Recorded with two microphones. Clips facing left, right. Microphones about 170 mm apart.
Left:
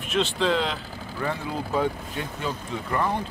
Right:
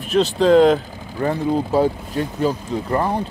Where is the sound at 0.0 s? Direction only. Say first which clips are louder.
Right 8 dB; 40° right (ahead or behind).